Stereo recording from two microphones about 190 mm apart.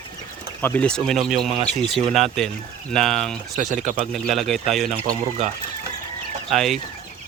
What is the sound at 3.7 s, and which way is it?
Speech, 40° right (ahead or behind).